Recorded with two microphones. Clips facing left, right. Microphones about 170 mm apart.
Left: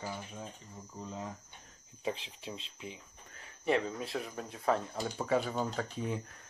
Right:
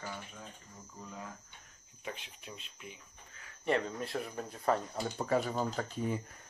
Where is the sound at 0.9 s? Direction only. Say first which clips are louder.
Left 4 dB; 25° left (ahead or behind).